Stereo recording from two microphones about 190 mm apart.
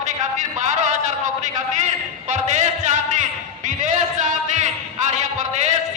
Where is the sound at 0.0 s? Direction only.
40° right (ahead or behind).